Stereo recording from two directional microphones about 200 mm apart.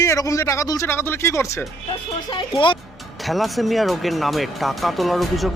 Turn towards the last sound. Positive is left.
turn(degrees=0)  # may be behind; listen again after turning